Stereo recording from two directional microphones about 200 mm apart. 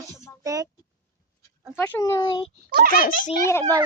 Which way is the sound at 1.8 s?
10° left (ahead or behind).